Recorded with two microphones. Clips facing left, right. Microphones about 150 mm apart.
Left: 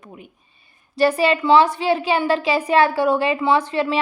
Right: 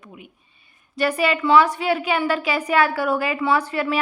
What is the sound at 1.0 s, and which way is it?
A woman's voice, 30° left (ahead or behind).